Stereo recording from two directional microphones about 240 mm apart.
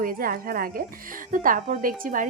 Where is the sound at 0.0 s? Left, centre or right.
Right.